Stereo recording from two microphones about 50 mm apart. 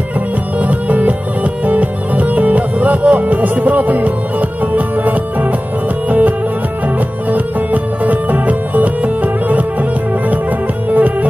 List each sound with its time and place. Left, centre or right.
0.6 s music: right